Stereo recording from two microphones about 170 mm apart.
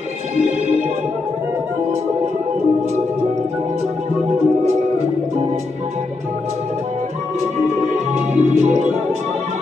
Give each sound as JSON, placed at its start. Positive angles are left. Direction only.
{"t": 7.7, "sound": "music", "side_deg": -40}